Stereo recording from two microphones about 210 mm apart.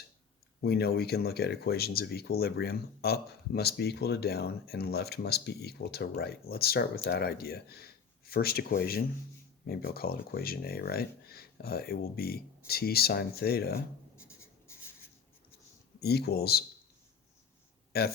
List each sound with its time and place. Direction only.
0.6 s speech: 50° left (ahead or behind)
14.2 s writing: 10° left (ahead or behind)
16.0 s speech: 50° left (ahead or behind)
17.9 s speech: 50° left (ahead or behind)